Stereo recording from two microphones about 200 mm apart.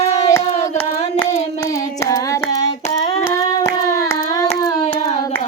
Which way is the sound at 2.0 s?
15° left (ahead or behind).